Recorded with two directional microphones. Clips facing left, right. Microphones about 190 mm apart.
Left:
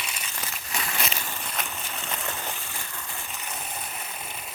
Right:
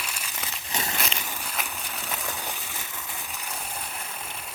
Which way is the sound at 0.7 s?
25° right (ahead or behind).